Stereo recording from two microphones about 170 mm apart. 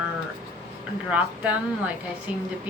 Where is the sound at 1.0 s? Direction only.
10° right (ahead or behind).